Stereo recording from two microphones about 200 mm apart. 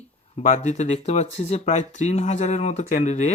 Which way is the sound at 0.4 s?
35° left (ahead or behind).